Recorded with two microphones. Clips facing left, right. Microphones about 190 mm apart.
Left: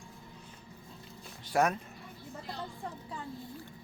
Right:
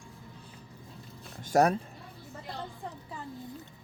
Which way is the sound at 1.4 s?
40° right (ahead or behind).